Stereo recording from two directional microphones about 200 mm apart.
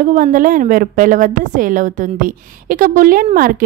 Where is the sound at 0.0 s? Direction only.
40° right (ahead or behind).